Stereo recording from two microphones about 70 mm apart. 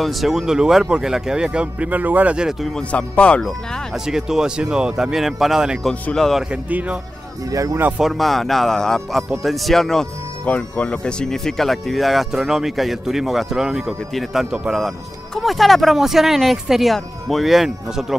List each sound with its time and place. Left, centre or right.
0.0 s speech: centre; by 2.3 s right
2.9 s speech: centre
3.9 s speech: centre
6.1 s speech: centre
6.5 s speech: centre
7.5 s speech: right
8.0 s speech: centre
10.4 s speech: centre